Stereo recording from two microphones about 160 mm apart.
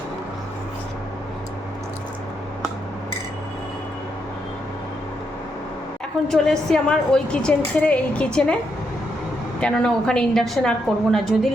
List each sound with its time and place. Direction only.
6.3 s a woman's voice: 5° left (ahead or behind)
9.6 s a woman's voice: 5° left (ahead or behind)